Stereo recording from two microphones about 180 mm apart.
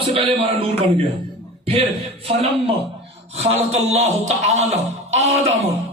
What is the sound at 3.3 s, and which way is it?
A man's voice, 35° right (ahead or behind).